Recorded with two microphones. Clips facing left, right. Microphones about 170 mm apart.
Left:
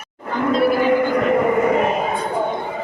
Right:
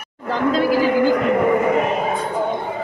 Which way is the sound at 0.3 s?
90° right.